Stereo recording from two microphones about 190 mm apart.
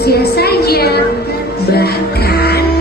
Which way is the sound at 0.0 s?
55° left (ahead or behind).